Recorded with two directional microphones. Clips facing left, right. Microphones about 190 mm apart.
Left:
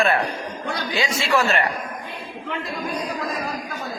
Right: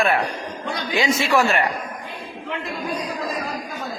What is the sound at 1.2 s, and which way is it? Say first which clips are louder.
Speech: left 1 dB; 15° right (ahead or behind).